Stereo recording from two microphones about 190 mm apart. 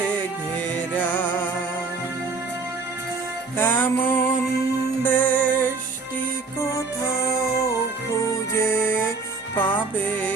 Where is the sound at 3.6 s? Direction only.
10° left (ahead or behind).